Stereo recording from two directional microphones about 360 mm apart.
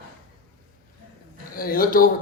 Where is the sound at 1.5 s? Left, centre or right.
Left.